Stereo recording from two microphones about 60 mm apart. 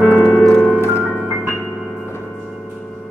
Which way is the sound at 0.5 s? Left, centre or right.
Centre.